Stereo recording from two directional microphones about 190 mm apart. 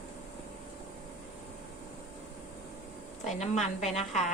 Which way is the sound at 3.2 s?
40° left (ahead or behind).